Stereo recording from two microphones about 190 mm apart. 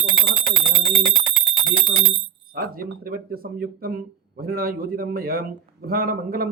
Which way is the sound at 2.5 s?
50° right (ahead or behind).